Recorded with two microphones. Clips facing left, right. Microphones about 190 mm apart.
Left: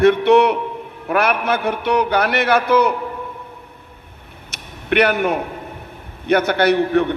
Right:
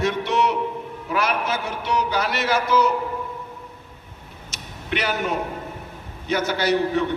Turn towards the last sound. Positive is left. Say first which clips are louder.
# left 5 dB
turn(degrees=60)  # may be behind; listen again after turning